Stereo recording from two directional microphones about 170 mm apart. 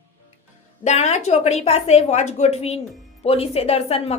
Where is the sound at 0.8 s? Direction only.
40° left (ahead or behind).